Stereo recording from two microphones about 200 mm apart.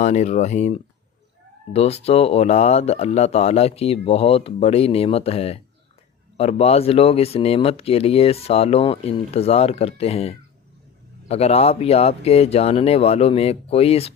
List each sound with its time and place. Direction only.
0.0 s speech: 35° left (ahead or behind)